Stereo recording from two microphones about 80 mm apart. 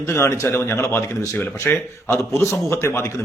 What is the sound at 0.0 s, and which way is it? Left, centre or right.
A man's voice, left.